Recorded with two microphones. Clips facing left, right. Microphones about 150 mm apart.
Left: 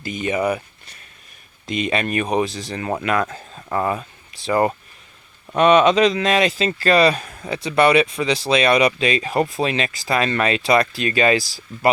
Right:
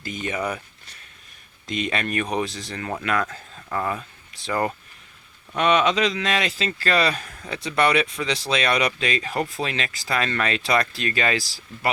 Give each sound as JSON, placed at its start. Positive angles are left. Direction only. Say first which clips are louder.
{"t": 0.0, "sound": "speech", "louder": "left 6 dB", "side_deg": 15}
{"t": 1.6, "sound": "speech", "louder": "left 4 dB", "side_deg": 10}
{"t": 3.2, "sound": "speech", "louder": "left 4 dB", "side_deg": 25}
{"t": 5.5, "sound": "speech", "louder": "left 6 dB", "side_deg": 40}
{"t": 6.4, "sound": "speech", "louder": "left 7 dB", "side_deg": 20}